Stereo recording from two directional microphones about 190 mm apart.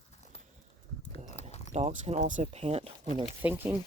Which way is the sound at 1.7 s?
35° right (ahead or behind).